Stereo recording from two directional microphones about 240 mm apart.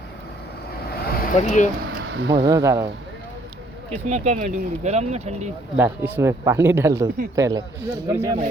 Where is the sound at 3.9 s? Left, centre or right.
Right.